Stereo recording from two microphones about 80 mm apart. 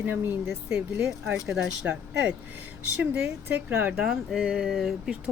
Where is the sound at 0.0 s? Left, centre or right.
Right.